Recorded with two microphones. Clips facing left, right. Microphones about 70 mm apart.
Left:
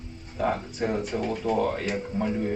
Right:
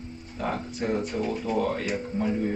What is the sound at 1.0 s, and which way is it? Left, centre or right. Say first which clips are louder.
Speech: even; left.